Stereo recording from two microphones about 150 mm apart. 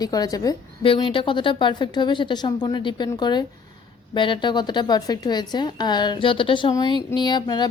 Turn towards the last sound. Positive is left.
turn(degrees=30)  # may be behind; listen again after turning